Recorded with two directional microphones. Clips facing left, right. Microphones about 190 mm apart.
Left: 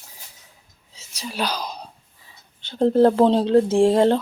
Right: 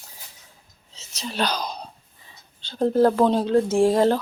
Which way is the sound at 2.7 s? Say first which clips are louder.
Left 3 dB; 25° left (ahead or behind).